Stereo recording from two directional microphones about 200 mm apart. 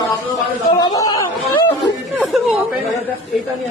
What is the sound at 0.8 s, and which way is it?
Chatter, 20° left (ahead or behind).